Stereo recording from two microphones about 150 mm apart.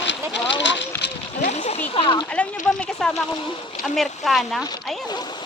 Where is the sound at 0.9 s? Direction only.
15° left (ahead or behind).